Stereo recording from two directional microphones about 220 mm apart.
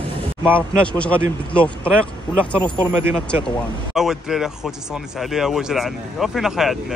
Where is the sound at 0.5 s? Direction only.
5° left (ahead or behind).